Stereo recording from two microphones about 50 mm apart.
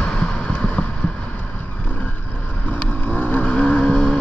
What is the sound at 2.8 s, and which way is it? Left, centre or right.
Vehicle, left.